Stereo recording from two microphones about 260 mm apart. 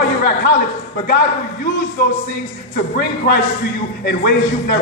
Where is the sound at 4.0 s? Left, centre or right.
Left.